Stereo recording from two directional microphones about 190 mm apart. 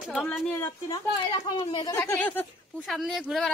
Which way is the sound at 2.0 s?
10° left (ahead or behind).